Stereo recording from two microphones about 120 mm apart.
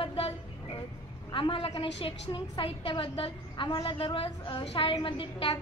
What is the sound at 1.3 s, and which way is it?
A woman's voice, 45° left (ahead or behind).